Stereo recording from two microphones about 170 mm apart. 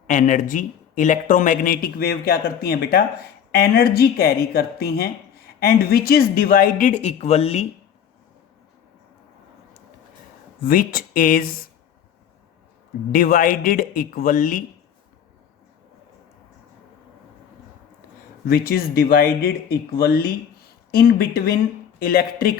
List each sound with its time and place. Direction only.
0.1 s speech: 50° left (ahead or behind)
10.6 s speech: 55° left (ahead or behind)
13.1 s speech: 55° left (ahead or behind)
18.4 s speech: 65° left (ahead or behind)